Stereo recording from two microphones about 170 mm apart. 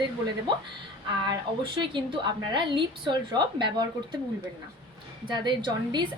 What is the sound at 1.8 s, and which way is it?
A woman's voice, 25° right (ahead or behind).